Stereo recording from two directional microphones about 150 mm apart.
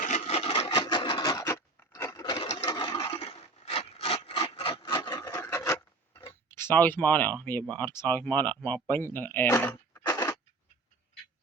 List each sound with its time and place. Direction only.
0.0 s sewing machine: 50° left (ahead or behind); by 2.5 s 30° left (ahead or behind)
2.6 s rub: 30° left (ahead or behind)
6.1 s speech: 20° left (ahead or behind)
9.6 s a sound: 15° left (ahead or behind)